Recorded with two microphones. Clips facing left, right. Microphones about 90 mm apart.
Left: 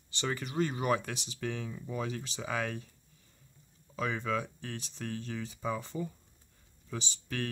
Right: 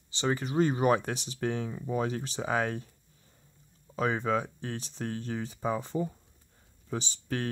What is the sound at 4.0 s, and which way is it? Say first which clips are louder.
Speech: right 5 dB; 35° right (ahead or behind).